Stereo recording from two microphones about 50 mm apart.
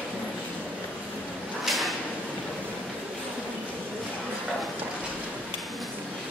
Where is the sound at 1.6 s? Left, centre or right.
Centre.